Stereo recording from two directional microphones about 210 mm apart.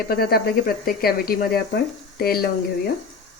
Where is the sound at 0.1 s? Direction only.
45° left (ahead or behind).